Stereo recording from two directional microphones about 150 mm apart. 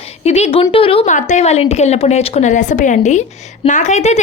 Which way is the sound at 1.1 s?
55° left (ahead or behind).